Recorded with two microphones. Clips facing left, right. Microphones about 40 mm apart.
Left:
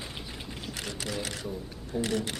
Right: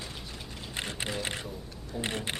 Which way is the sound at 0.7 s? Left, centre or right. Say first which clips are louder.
Right 2 dB; right.